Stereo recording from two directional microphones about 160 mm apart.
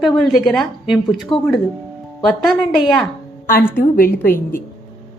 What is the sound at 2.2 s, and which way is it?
Speech, centre (ahead or behind).